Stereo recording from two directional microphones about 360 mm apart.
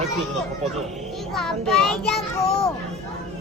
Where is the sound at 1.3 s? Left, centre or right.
Centre.